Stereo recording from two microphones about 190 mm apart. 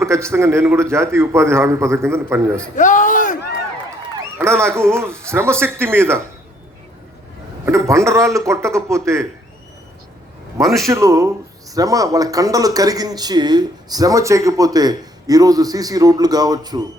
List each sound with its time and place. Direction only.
0.0 s a man's voice: 15° right (ahead or behind)
2.7 s speech: 45° left (ahead or behind)
4.4 s a man's voice: 15° right (ahead or behind)
7.6 s a man's voice: 15° right (ahead or behind)
10.6 s a man's voice: centre (ahead or behind)
10.8 s a man's voice: 15° right (ahead or behind)